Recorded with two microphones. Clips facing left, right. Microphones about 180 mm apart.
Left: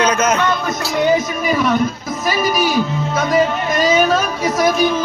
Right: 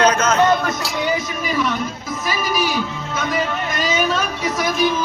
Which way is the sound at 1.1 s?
45° left (ahead or behind).